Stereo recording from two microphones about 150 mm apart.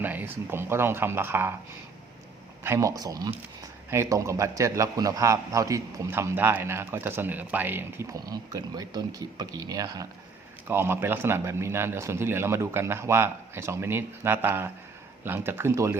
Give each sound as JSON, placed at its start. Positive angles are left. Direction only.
{"t": 0.0, "sound": "a man's voice", "side_deg": -10}
{"t": 2.6, "sound": "a man's voice", "side_deg": -20}
{"t": 10.7, "sound": "a man's voice", "side_deg": -15}